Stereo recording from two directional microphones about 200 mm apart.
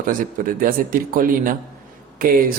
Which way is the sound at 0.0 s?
45° right (ahead or behind).